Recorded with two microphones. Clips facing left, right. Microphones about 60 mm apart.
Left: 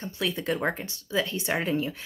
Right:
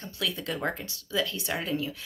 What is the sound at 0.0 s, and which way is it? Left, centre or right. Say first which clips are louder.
Speech: left 3 dB; left.